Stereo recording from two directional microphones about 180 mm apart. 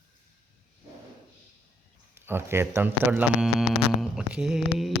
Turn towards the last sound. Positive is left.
turn(degrees=0)  # may be behind; listen again after turning